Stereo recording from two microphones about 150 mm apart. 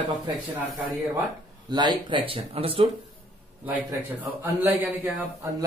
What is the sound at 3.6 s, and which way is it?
A man's voice, 10° right (ahead or behind).